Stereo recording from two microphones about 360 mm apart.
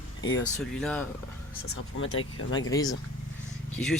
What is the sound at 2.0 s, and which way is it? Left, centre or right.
Speech, left.